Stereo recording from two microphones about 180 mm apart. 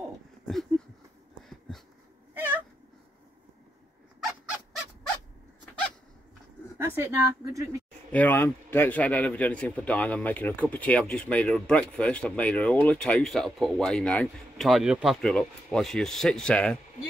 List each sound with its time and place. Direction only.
0.5 s a sound: centre (ahead or behind)
6.8 s speech: 15° right (ahead or behind)
8.1 s a man's voice: 10° left (ahead or behind)